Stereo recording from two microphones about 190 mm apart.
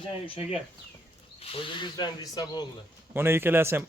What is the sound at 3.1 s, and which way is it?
Speech, 10° right (ahead or behind).